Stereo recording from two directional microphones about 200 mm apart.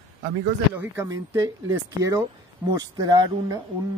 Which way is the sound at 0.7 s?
10° right (ahead or behind).